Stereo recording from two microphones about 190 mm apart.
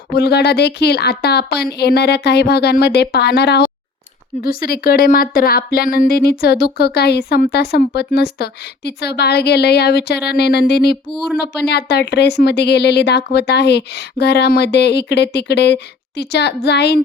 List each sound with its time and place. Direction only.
0.1 s speech: 60° left (ahead or behind)